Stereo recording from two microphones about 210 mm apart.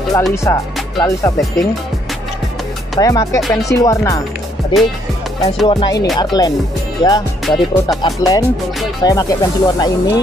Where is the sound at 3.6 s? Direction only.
15° left (ahead or behind).